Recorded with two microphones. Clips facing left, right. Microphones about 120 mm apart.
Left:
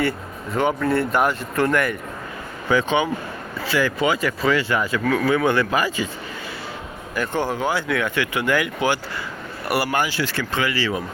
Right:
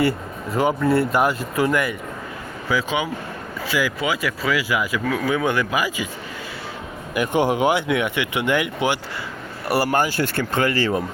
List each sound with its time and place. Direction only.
0.5 s speech: 5° right (ahead or behind)
7.1 s speech: 15° right (ahead or behind)
9.6 s speech: 35° right (ahead or behind)